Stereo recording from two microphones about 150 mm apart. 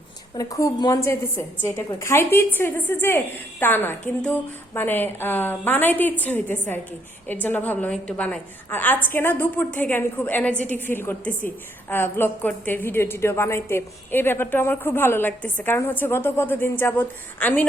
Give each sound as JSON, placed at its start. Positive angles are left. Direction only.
{"t": 0.3, "sound": "a woman's voice", "side_deg": 20}